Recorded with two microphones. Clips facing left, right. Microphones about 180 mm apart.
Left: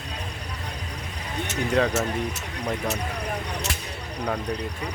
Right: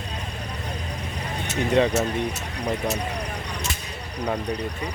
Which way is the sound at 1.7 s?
Centre (ahead or behind).